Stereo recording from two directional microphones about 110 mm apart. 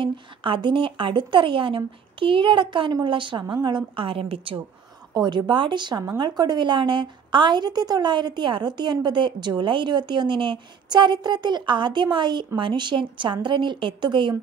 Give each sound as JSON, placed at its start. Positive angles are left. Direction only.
{"t": 0.0, "sound": "a woman's voice", "side_deg": -50}
{"t": 5.1, "sound": "a woman's voice", "side_deg": -45}